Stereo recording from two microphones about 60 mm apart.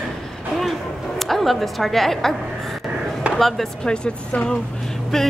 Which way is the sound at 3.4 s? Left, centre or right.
Centre.